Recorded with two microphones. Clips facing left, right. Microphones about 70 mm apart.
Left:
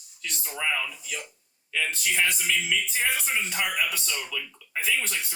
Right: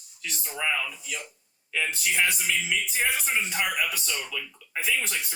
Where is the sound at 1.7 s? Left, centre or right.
Centre.